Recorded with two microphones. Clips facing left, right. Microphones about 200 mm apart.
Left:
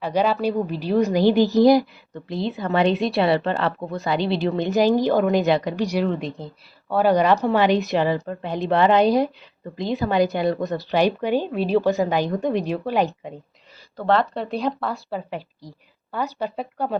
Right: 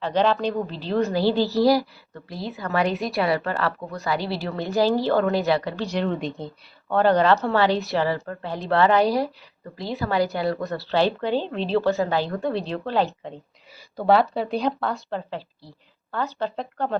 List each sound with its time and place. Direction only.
0.0 s a woman's voice: 10° left (ahead or behind)
6.0 s speech: centre (ahead or behind)
6.9 s a woman's voice: 10° left (ahead or behind)
13.9 s speech: 10° right (ahead or behind)
15.3 s a woman's voice: 15° left (ahead or behind)